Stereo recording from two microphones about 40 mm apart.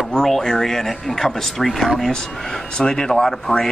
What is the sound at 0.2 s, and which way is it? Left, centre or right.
Speech, centre.